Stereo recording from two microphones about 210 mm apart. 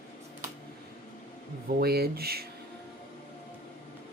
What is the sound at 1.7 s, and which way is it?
Speech, 45° right (ahead or behind).